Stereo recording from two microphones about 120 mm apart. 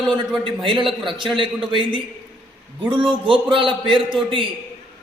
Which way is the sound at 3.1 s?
45° right (ahead or behind).